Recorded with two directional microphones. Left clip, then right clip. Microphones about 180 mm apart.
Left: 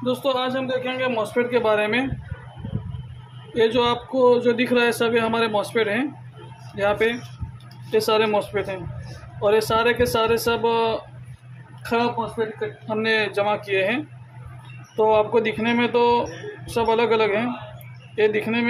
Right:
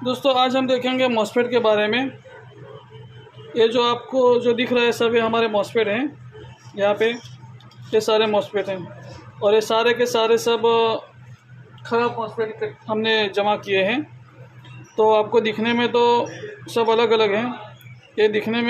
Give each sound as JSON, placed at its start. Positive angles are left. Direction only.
{"t": 0.0, "sound": "speech", "side_deg": -15}
{"t": 0.5, "sound": "a man's voice", "side_deg": -45}
{"t": 1.3, "sound": "a man's voice", "side_deg": -25}
{"t": 1.6, "sound": "speech", "side_deg": -10}
{"t": 3.5, "sound": "speech", "side_deg": -5}